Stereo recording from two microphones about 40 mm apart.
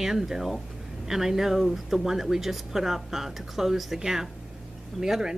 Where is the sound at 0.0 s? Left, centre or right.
Centre.